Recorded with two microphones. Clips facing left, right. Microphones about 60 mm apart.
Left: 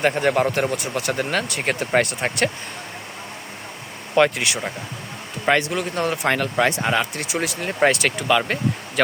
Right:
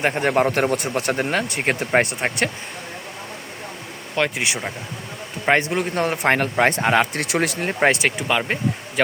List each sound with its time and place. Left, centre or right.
0.2 s speech: right
0.5 s speech: right; by 2.5 s centre
4.4 s speech: right
7.2 s speech: right
7.8 s speech: right